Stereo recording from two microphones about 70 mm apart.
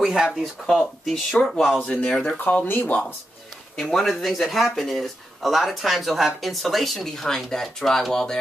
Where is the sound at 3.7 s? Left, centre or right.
Centre.